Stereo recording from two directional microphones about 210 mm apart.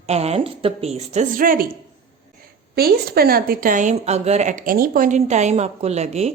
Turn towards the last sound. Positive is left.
turn(degrees=-30)  # may be behind; listen again after turning